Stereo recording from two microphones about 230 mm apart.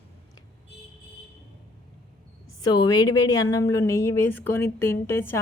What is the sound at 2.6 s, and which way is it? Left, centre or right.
A woman's voice, centre.